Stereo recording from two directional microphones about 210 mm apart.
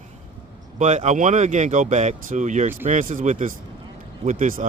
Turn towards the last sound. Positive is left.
turn(degrees=-40)  # may be behind; listen again after turning